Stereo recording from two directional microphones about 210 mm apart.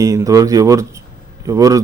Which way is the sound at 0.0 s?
15° right (ahead or behind).